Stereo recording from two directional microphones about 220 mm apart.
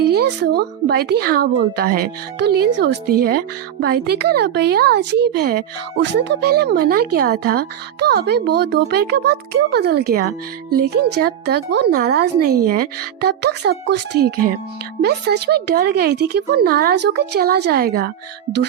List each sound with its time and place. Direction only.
0.0 s speech: 50° right (ahead or behind)